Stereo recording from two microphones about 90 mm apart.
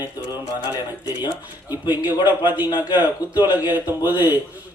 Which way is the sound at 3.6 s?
20° right (ahead or behind).